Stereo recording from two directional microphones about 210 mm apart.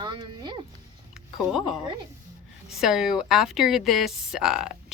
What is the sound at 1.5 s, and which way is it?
Speech, centre (ahead or behind).